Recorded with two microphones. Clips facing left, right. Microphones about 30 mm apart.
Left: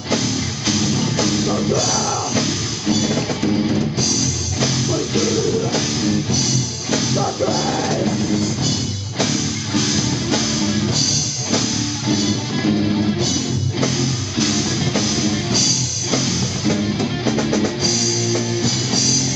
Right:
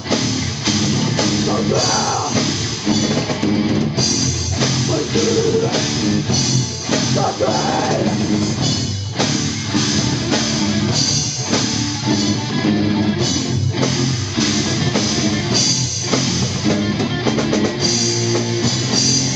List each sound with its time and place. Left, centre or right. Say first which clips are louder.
0.7 s music: right 1 dB; centre
2.3 s music: right 1 dB; centre
5.1 s music: right 4 dB; centre
12.1 s music: right 1 dB; centre
14.4 s music: right 1 dB; centre